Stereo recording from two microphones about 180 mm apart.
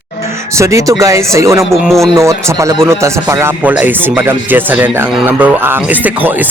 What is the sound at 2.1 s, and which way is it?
Speech, 15° right (ahead or behind).